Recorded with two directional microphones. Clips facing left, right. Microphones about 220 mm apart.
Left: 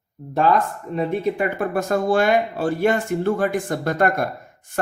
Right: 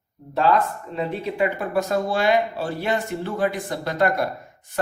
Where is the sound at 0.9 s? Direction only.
50° left (ahead or behind).